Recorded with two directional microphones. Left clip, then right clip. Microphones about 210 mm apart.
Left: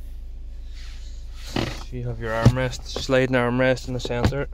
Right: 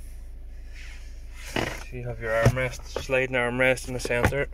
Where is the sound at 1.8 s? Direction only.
20° left (ahead or behind).